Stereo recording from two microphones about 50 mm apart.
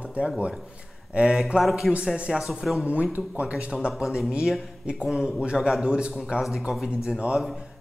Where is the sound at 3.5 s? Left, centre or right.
Centre.